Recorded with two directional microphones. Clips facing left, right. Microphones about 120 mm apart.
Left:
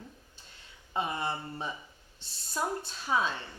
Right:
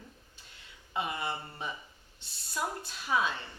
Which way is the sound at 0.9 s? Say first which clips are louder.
Left 2 dB; 35° left (ahead or behind).